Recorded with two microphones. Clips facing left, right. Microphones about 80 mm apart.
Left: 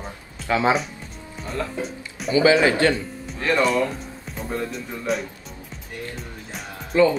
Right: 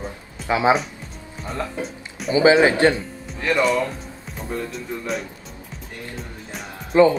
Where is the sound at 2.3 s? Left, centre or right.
Right.